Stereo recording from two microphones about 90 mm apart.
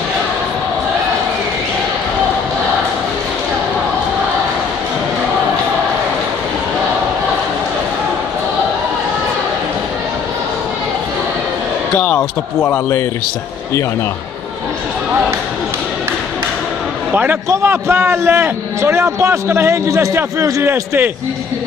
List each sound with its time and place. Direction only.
12.0 s speech: 20° left (ahead or behind)
17.1 s a man's voice: 20° right (ahead or behind)